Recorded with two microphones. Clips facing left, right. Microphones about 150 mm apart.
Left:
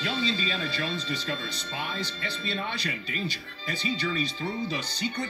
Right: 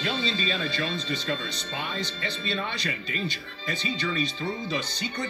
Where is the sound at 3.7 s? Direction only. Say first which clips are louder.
Even; 20° right (ahead or behind).